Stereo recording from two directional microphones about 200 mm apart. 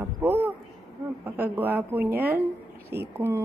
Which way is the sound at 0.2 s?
10° right (ahead or behind).